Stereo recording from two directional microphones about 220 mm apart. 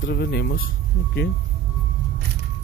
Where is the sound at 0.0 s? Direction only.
45° left (ahead or behind).